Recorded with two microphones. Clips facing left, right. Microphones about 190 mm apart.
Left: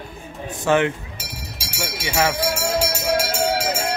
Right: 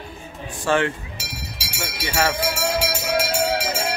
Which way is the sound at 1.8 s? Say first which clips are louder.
Left 2 dB; 15° left (ahead or behind).